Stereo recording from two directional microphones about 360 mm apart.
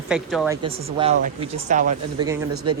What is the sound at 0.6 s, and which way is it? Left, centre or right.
Speech, centre.